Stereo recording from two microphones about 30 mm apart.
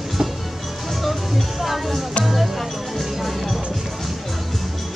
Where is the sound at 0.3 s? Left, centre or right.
Centre.